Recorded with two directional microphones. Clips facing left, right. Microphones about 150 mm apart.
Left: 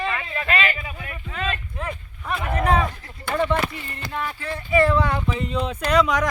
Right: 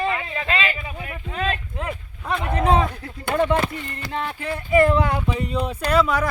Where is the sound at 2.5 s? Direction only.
20° right (ahead or behind).